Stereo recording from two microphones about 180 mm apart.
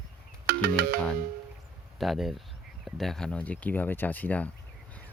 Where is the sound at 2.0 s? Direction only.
Centre (ahead or behind).